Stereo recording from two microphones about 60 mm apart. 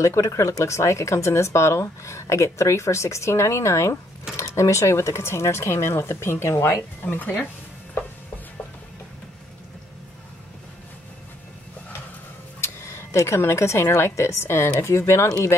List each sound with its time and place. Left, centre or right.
0.0 s speech: left
7.1 s speech: left
12.5 s speech: left